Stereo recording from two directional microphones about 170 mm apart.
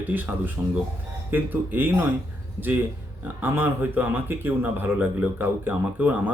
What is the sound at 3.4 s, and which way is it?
Speech, 10° right (ahead or behind).